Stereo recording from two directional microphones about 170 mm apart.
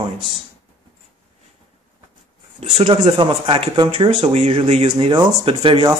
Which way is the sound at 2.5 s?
30° right (ahead or behind).